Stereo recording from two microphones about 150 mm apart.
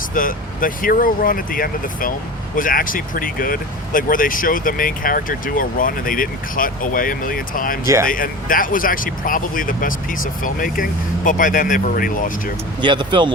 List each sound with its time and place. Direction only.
0.1 s speech: 65° left (ahead or behind)
12.8 s speech: 30° right (ahead or behind)